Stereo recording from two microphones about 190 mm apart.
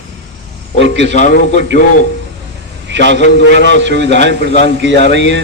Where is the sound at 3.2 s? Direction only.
40° left (ahead or behind).